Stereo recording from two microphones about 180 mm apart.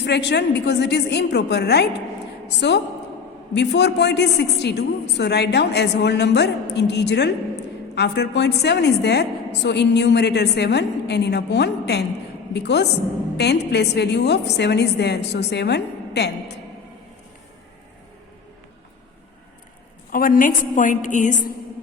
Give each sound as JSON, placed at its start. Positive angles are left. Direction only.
{"t": 0.0, "sound": "a woman's voice", "side_deg": 70}
{"t": 20.1, "sound": "a woman's voice", "side_deg": 50}